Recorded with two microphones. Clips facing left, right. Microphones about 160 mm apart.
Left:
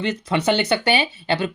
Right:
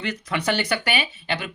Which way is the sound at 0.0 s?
25° left (ahead or behind).